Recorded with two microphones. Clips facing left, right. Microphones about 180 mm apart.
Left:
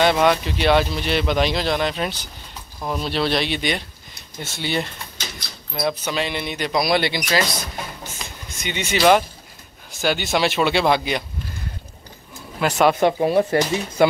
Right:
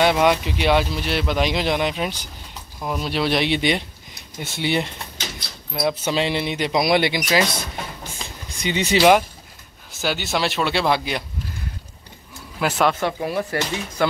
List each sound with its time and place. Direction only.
0.0 s speech: 10° right (ahead or behind)
1.5 s speech: 15° right (ahead or behind)
6.0 s speech: 25° right (ahead or behind)
8.5 s speech: 35° right (ahead or behind)
9.9 s speech: 5° right (ahead or behind)
12.5 s speech: centre (ahead or behind)
13.0 s speech: 25° left (ahead or behind)